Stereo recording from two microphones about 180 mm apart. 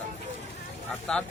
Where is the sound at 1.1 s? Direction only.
5° left (ahead or behind).